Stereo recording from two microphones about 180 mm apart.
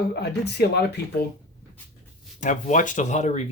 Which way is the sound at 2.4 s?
45° left (ahead or behind).